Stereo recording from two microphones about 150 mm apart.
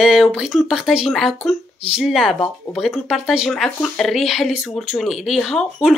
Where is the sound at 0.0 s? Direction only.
Centre (ahead or behind).